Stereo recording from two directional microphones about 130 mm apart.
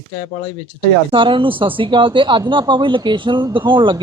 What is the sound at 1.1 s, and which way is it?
Speech, 40° right (ahead or behind).